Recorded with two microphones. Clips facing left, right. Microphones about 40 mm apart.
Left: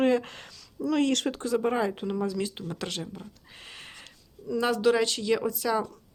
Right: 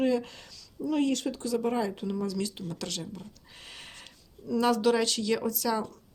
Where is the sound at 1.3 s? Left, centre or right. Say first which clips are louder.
Left 3 dB; left.